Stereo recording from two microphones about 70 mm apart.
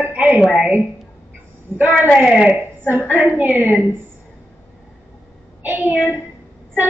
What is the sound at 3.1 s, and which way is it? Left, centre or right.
Speech, right.